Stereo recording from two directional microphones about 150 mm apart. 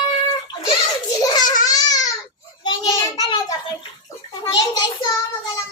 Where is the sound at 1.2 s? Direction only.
25° left (ahead or behind).